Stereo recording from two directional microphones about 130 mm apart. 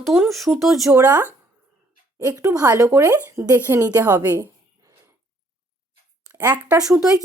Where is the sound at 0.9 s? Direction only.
15° right (ahead or behind).